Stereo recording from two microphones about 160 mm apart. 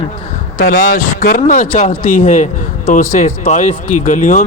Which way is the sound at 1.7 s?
40° left (ahead or behind).